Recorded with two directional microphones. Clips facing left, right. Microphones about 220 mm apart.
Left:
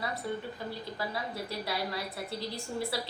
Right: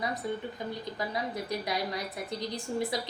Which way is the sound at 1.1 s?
15° right (ahead or behind).